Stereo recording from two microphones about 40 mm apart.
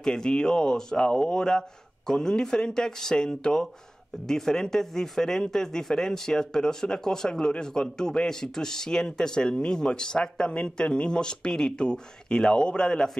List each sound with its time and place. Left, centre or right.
0.0 s speech: centre